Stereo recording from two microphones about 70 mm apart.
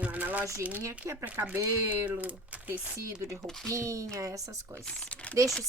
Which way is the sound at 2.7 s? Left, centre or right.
Right.